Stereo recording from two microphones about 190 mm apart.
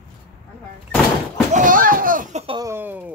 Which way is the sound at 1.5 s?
45° right (ahead or behind).